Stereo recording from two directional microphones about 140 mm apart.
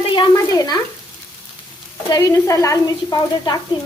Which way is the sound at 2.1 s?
25° left (ahead or behind).